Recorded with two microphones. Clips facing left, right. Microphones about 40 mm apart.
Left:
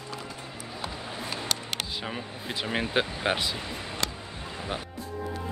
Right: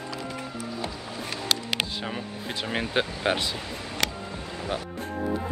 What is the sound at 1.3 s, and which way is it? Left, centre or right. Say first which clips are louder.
Music: right 5 dB; right.